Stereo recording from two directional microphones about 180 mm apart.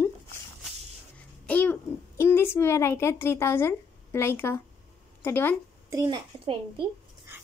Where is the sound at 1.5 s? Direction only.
10° left (ahead or behind).